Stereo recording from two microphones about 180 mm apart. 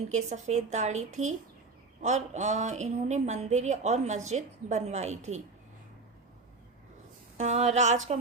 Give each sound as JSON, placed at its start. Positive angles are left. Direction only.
{"t": 0.1, "sound": "speech", "side_deg": -40}
{"t": 7.3, "sound": "speech", "side_deg": -40}